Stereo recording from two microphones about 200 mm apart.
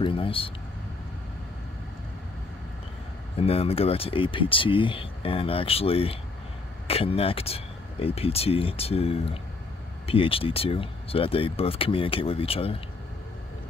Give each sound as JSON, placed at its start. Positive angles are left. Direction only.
{"t": 0.0, "sound": "speech", "side_deg": 25}
{"t": 3.3, "sound": "speech", "side_deg": 30}